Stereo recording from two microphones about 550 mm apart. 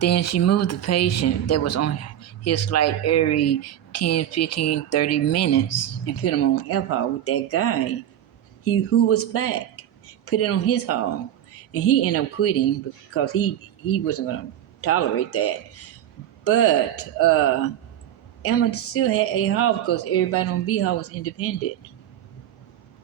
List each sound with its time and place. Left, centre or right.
0.0 s speech: left